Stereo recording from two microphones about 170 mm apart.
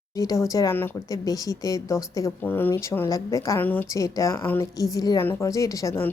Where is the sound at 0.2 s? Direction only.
20° left (ahead or behind).